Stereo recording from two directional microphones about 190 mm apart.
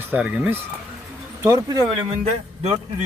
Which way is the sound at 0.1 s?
5° right (ahead or behind).